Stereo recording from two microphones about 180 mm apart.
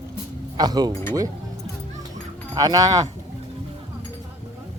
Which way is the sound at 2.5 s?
20° right (ahead or behind).